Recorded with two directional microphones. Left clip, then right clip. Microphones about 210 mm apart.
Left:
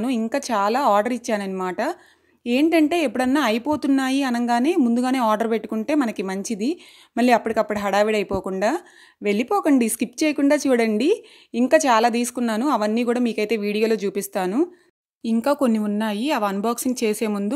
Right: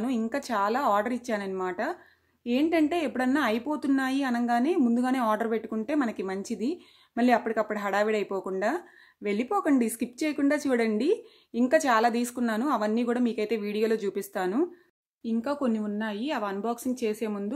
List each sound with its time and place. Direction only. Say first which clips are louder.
0.0 s speech: left 6 dB; 35° left (ahead or behind)
15.2 s speech: left 9 dB; 50° left (ahead or behind)